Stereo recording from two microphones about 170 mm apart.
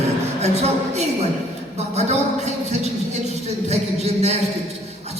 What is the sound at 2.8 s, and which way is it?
Speech, 40° right (ahead or behind).